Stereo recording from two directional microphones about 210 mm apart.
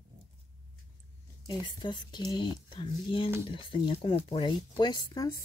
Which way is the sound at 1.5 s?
20° left (ahead or behind).